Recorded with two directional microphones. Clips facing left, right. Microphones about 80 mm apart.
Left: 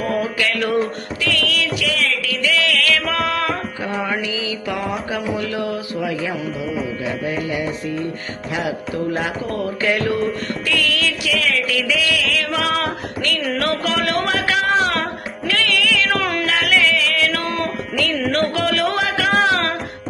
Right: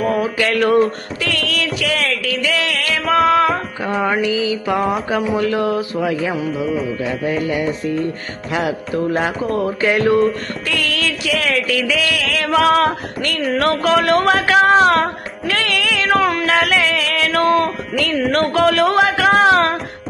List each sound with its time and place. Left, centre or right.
0.0 s music: centre
0.3 s music: right
3.3 s music: centre
3.9 s music: right
9.6 s music: right
10.7 s music: right
16.2 s music: centre
16.5 s music: right